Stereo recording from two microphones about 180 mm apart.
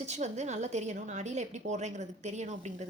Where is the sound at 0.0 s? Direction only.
40° right (ahead or behind).